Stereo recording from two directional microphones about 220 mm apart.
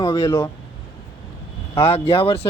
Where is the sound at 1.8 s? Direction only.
25° left (ahead or behind).